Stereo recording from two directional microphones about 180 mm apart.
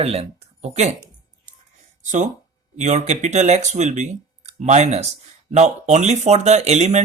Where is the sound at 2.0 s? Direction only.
40° right (ahead or behind).